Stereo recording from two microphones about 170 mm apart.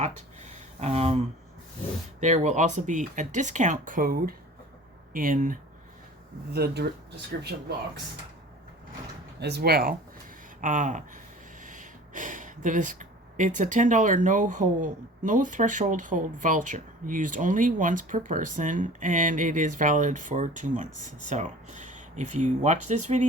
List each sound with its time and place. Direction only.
0.0 s a sound: 40° right (ahead or behind)
2.2 s speech: 45° right (ahead or behind)
6.5 s speech: 70° right (ahead or behind)
9.4 s speech: 70° right (ahead or behind)
10.6 s speech: 50° right (ahead or behind)